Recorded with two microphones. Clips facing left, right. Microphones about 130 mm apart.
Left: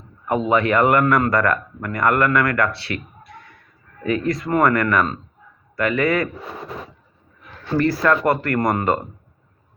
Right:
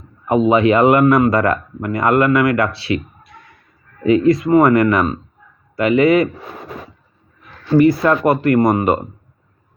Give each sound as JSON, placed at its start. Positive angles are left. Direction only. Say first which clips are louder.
{"t": 0.3, "sound": "speech", "louder": "right 6 dB", "side_deg": -20}
{"t": 7.8, "sound": "speech", "louder": "right 5 dB", "side_deg": -20}